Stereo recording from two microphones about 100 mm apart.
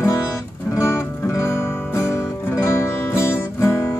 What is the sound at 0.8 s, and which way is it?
Music, 25° left (ahead or behind).